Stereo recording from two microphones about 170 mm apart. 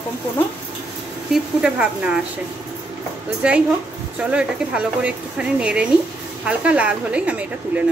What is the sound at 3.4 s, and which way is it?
Speech, 5° right (ahead or behind).